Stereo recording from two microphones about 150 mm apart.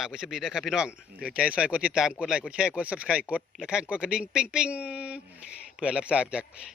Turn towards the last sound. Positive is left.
turn(degrees=-5)  # may be behind; listen again after turning